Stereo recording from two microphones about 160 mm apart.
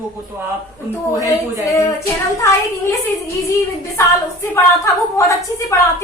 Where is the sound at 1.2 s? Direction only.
20° left (ahead or behind).